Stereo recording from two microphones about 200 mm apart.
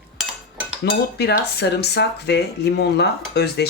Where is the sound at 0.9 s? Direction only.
55° left (ahead or behind).